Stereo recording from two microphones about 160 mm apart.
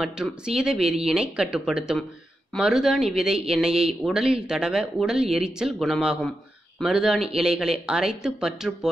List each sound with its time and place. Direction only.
0.0 s speech: 5° right (ahead or behind)